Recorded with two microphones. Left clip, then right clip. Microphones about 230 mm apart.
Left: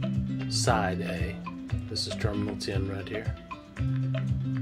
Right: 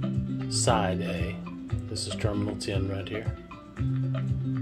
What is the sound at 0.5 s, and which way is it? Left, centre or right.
Speech, centre.